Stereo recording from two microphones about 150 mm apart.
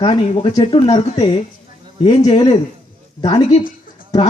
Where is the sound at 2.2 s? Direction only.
40° left (ahead or behind).